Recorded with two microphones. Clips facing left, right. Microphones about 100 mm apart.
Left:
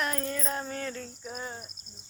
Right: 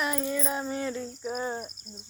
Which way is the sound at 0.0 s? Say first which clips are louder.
Right 3 dB; 10° right (ahead or behind).